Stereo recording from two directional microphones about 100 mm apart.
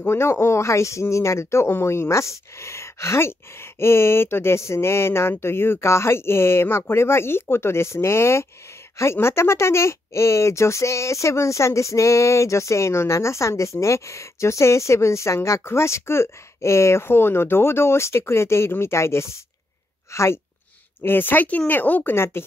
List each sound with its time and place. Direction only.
0.0 s speech: 25° left (ahead or behind)